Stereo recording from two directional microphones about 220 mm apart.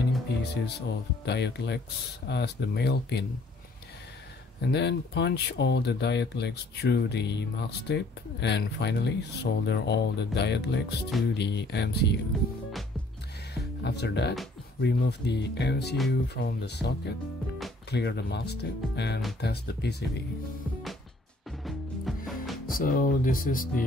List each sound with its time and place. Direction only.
0.4 s speech: 50° left (ahead or behind)
4.6 s speech: 50° left (ahead or behind)
13.8 s speech: 50° left (ahead or behind)
21.5 s music: centre (ahead or behind)
22.8 s speech: 40° left (ahead or behind)